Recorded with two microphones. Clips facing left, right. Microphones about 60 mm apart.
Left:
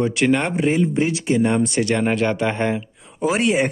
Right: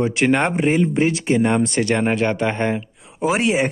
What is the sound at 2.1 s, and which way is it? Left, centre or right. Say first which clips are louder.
Speech: even; centre.